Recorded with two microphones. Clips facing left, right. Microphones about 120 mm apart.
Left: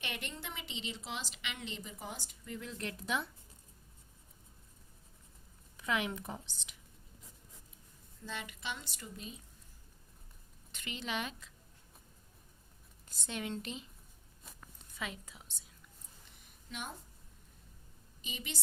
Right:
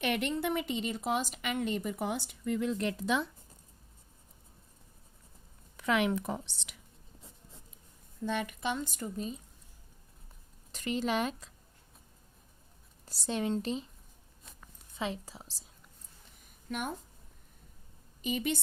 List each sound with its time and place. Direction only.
0.0 s a woman's voice: 65° right (ahead or behind); by 3.2 s 90° right
5.7 s speech: 80° right
8.2 s a woman's voice: 55° right (ahead or behind); by 9.4 s 40° right (ahead or behind)
10.7 s speech: 40° right (ahead or behind)
13.1 s speech: 35° right (ahead or behind)
14.9 s speech: 30° right (ahead or behind)
16.4 s a sound: 55° right (ahead or behind)
18.2 s a woman's voice: 50° right (ahead or behind)